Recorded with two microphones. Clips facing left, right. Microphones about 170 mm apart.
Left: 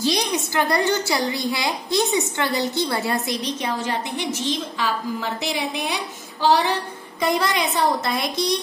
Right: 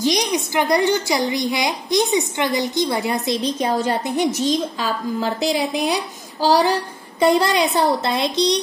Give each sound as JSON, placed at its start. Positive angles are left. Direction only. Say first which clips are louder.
{"t": 0.0, "sound": "a woman's voice", "louder": "right 3 dB", "side_deg": -15}
{"t": 3.6, "sound": "a woman's voice", "louder": "right 7 dB", "side_deg": -40}